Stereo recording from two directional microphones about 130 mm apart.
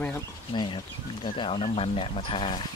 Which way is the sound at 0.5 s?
35° left (ahead or behind).